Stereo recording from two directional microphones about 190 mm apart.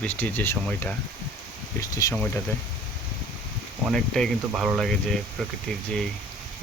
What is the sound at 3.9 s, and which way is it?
Speech, centre (ahead or behind).